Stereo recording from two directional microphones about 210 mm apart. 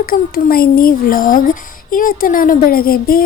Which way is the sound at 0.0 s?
45° left (ahead or behind).